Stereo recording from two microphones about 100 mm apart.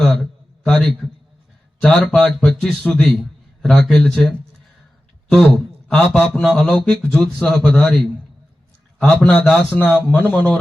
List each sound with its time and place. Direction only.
0.0 s a sound: 5° left (ahead or behind)
1.8 s a man's voice: centre (ahead or behind)
9.0 s a man's voice: 15° left (ahead or behind)